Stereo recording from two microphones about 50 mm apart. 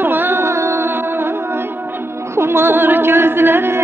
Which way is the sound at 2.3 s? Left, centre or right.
Right.